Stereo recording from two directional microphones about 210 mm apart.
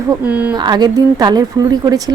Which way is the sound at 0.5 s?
20° right (ahead or behind).